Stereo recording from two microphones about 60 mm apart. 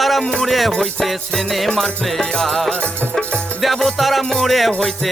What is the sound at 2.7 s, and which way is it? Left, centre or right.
Music, centre.